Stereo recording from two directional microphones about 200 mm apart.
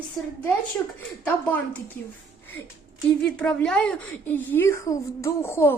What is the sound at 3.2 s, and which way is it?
A woman's voice, 5° left (ahead or behind).